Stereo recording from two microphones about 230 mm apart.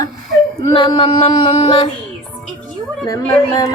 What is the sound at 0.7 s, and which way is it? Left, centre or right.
Female singing, left.